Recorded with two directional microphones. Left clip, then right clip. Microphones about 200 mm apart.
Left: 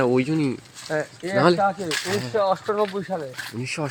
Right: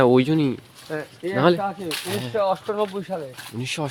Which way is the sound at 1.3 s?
5° right (ahead or behind).